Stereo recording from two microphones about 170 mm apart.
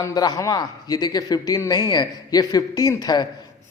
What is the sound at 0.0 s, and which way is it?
A man's voice, 20° left (ahead or behind).